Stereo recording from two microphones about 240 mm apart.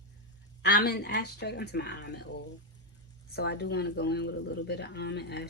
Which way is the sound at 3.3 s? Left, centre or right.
Left.